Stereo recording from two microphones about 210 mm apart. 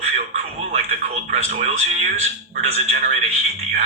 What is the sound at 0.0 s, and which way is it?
Speech, 35° right (ahead or behind).